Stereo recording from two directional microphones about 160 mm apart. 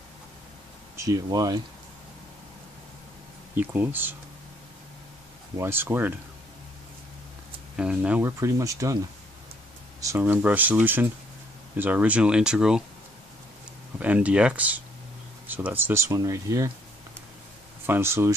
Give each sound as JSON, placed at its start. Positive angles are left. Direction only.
{"t": 1.0, "sound": "speech", "side_deg": -20}
{"t": 3.5, "sound": "speech", "side_deg": -10}
{"t": 5.6, "sound": "speech", "side_deg": -15}
{"t": 7.7, "sound": "speech", "side_deg": -5}
{"t": 13.9, "sound": "speech", "side_deg": -10}
{"t": 17.8, "sound": "speech", "side_deg": -15}